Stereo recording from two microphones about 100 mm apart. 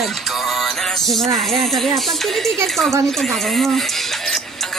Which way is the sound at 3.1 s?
5° left (ahead or behind).